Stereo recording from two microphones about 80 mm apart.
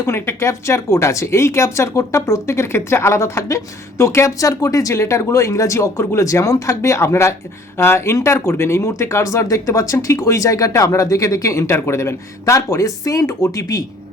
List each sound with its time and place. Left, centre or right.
0.0 s speech: left